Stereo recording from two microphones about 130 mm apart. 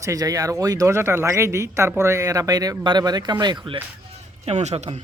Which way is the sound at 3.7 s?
45° right (ahead or behind).